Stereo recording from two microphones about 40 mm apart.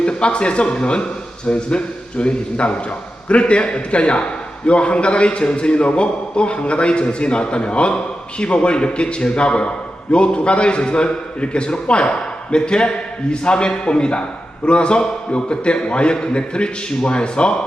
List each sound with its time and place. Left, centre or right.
0.0 s a man's voice: left